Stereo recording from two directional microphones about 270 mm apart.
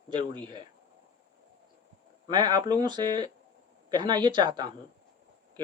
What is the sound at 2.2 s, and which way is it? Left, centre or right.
A man's voice, centre.